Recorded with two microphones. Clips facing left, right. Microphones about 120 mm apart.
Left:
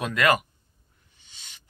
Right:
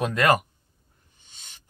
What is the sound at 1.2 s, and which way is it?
Owl, 45° right (ahead or behind).